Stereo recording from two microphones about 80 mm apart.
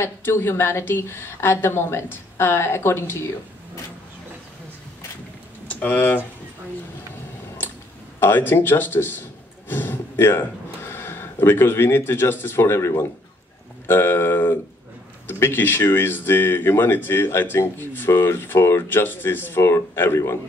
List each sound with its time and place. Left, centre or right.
0.0 s a woman's voice: left
5.7 s speech: left
8.2 s speech: left